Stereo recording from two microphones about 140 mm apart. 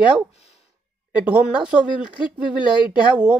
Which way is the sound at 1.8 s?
35° left (ahead or behind).